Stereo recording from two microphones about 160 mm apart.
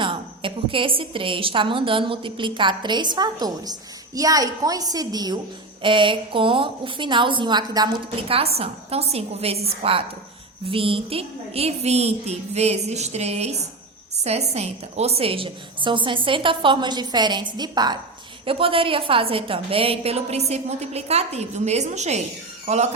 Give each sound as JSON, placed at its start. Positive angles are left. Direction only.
{"t": 0.0, "sound": "a woman's voice", "side_deg": -30}